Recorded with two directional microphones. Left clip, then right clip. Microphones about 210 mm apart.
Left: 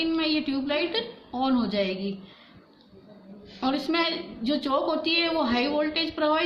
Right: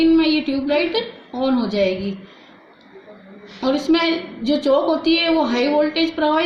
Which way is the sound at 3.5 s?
35° left (ahead or behind).